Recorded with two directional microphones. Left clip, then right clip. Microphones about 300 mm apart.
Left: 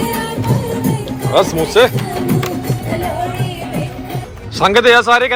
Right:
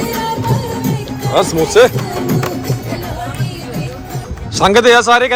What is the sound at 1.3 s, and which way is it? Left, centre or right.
Speech, centre.